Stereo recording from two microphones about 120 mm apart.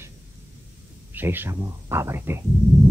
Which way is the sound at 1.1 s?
15° right (ahead or behind).